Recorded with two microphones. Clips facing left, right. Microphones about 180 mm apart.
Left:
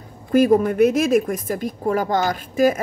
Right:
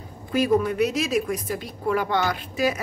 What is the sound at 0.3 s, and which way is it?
A woman's voice, 50° left (ahead or behind).